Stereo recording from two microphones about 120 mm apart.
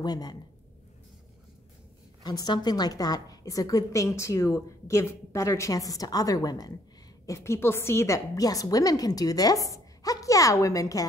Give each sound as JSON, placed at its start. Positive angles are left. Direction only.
{"t": 0.0, "sound": "speech", "side_deg": 35}
{"t": 2.2, "sound": "a woman's voice", "side_deg": 35}